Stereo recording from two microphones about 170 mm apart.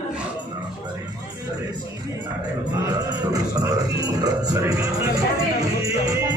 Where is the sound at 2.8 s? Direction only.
20° right (ahead or behind).